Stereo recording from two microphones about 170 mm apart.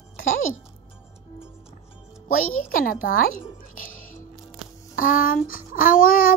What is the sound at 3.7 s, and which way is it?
Music, 50° left (ahead or behind).